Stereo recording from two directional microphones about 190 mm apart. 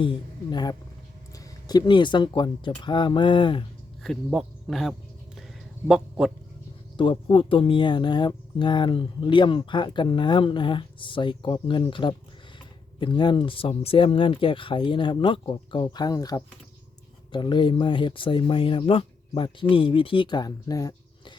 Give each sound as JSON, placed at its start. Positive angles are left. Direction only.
{"t": 0.5, "sound": "speech", "side_deg": 20}
{"t": 4.0, "sound": "a sound", "side_deg": 0}
{"t": 5.9, "sound": "speech", "side_deg": -5}
{"t": 6.9, "sound": "speech", "side_deg": 25}